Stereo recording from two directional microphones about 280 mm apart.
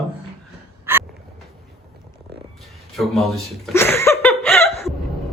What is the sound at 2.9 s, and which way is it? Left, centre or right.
Chuckle, centre.